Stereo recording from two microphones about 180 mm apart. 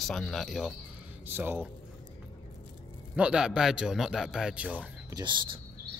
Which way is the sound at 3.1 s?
5° right (ahead or behind).